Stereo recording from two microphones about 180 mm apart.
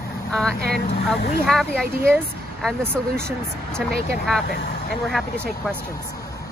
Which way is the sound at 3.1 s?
60° right (ahead or behind).